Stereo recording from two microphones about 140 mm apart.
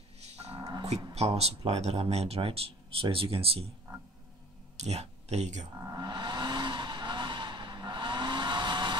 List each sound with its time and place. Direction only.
0.2 s music: 50° right (ahead or behind)
1.1 s speech: 50° right (ahead or behind)
4.7 s speech: 50° right (ahead or behind)
5.8 s speech: 20° right (ahead or behind)
6.0 s vehicle: 35° right (ahead or behind)